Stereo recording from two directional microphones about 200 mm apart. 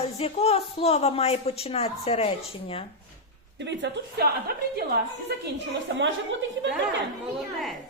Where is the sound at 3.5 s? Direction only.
60° right (ahead or behind).